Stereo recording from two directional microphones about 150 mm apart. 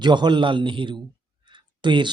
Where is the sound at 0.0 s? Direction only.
30° right (ahead or behind).